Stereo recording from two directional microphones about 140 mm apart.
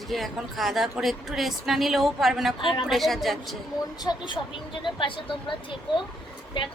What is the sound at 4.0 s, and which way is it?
A woman's voice, 30° left (ahead or behind).